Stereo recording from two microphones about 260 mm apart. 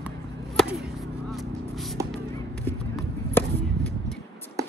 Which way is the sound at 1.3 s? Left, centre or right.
Centre.